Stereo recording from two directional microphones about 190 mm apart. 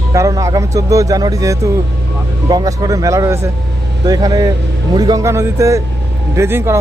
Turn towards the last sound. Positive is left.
turn(degrees=-15)  # may be behind; listen again after turning